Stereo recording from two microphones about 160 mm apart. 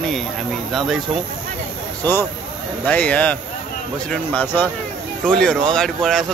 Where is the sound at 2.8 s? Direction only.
10° left (ahead or behind).